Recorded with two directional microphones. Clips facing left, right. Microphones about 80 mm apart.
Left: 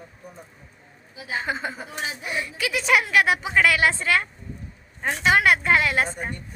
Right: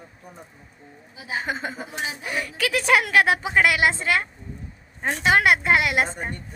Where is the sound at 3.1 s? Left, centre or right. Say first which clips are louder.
Right 1 dB; right.